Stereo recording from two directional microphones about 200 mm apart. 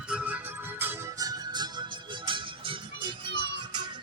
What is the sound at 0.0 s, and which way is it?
Music, 5° right (ahead or behind).